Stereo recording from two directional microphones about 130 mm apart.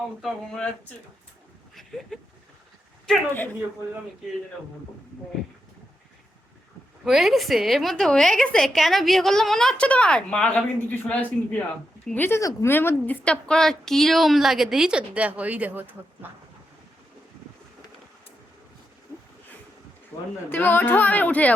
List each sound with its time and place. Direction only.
0.2 s a woman's voice: 5° left (ahead or behind)
1.7 s a sound: 5° left (ahead or behind)
7.0 s a woman's voice: 5° right (ahead or behind)
20.1 s speech: 15° left (ahead or behind)